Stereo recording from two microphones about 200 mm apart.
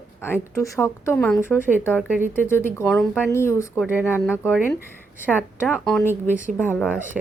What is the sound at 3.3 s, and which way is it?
Speech, 15° left (ahead or behind).